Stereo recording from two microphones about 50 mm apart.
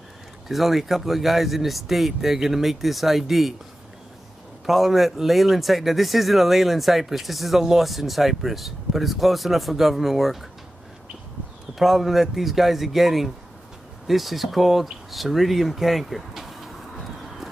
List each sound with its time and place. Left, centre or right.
0.5 s speech: centre
4.6 s speech: centre
11.8 s speech: centre